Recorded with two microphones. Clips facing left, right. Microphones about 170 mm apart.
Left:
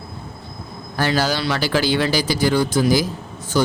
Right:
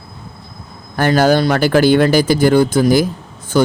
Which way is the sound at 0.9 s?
50° right (ahead or behind).